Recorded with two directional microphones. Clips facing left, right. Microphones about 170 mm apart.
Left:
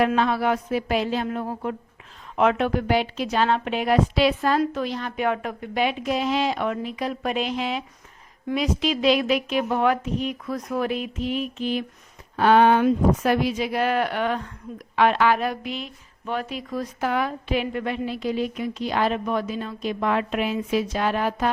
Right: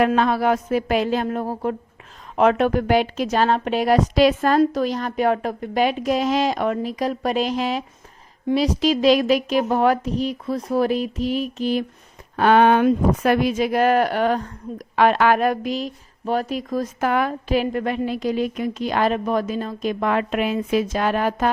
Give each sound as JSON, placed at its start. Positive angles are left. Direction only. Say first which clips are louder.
{"t": 0.2, "sound": "a woman's voice", "louder": "right 3 dB", "side_deg": -40}
{"t": 12.4, "sound": "speech", "louder": "right 2 dB", "side_deg": -60}